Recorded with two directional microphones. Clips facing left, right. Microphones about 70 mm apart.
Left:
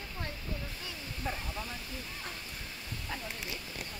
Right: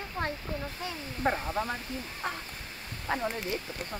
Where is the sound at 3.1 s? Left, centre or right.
Right.